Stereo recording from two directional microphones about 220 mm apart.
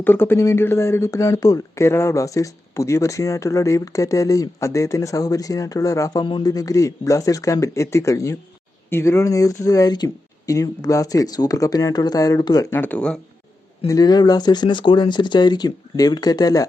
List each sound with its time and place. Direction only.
0.0 s speech: 10° left (ahead or behind)
13.8 s speech: 15° left (ahead or behind)